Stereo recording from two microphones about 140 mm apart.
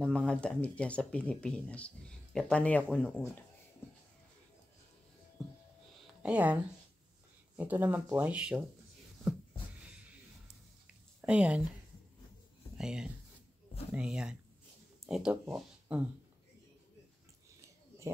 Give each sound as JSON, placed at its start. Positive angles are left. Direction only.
{"t": 0.0, "sound": "speech", "side_deg": 5}
{"t": 5.4, "sound": "a sound", "side_deg": 0}
{"t": 6.2, "sound": "speech", "side_deg": -10}
{"t": 11.1, "sound": "speech", "side_deg": -10}
{"t": 12.7, "sound": "speech", "side_deg": -5}